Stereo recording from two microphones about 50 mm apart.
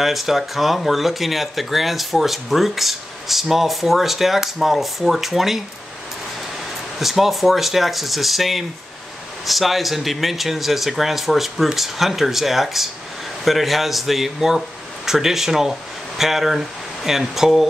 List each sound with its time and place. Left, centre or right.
0.0 s speech: centre
7.0 s speech: centre